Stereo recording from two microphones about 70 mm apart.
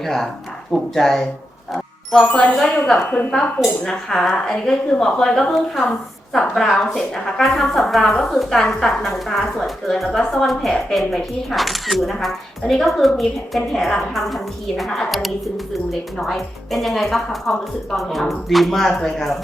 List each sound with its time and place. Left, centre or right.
0.0 s a woman's voice: centre
2.2 s a woman's voice: centre
3.3 s a woman's voice: centre